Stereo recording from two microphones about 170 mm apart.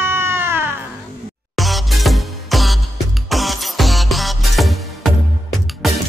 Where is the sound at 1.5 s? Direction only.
Centre (ahead or behind).